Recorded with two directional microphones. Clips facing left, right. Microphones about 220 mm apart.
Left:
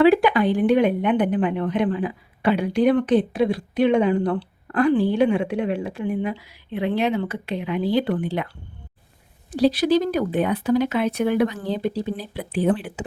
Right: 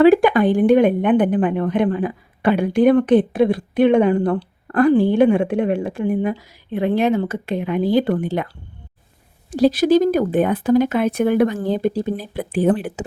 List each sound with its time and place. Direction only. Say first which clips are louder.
0.0 s a woman's voice: right 4 dB; 45° right (ahead or behind)
9.5 s a woman's voice: right 4 dB; 45° right (ahead or behind)